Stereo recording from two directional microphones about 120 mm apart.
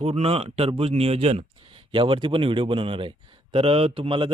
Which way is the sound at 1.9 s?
45° right (ahead or behind).